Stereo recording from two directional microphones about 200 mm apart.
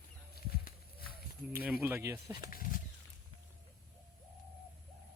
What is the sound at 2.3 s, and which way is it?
Speech, 45° left (ahead or behind).